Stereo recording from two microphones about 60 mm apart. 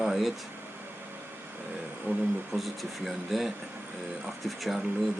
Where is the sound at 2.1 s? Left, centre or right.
Right.